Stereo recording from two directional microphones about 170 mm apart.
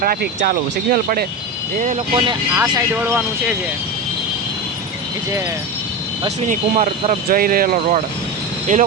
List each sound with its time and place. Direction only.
0.0 s speech: 55° right (ahead or behind)
2.6 s speech: 10° right (ahead or behind)
6.2 s speech: 45° right (ahead or behind)
7.3 s speech: 60° right (ahead or behind)